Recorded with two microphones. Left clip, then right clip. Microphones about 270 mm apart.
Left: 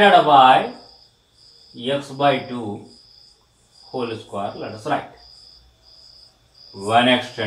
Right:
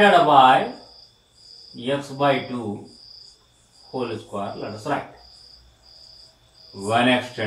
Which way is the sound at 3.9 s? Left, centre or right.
Centre.